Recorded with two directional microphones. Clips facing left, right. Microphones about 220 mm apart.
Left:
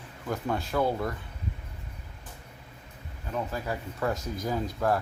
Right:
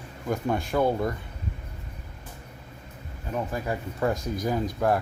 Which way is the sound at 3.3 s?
20° right (ahead or behind).